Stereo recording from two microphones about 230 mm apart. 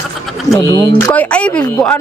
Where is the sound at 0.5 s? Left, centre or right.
Centre.